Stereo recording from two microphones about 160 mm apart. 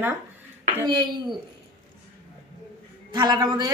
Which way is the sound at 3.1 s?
25° right (ahead or behind).